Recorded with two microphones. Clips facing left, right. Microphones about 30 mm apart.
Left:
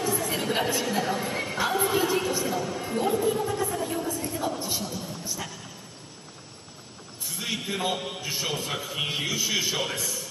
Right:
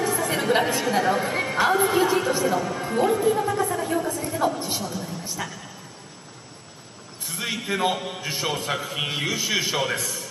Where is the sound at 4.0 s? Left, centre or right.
Centre.